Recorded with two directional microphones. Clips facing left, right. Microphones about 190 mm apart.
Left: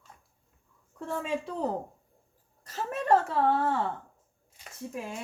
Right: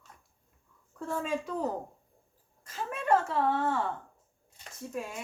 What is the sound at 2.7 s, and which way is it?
Speech, 40° left (ahead or behind).